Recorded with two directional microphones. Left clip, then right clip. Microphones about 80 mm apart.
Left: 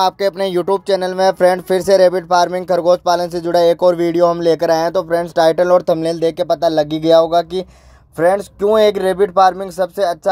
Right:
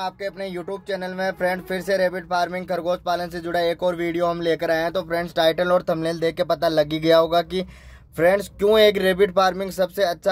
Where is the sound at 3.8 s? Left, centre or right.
Left.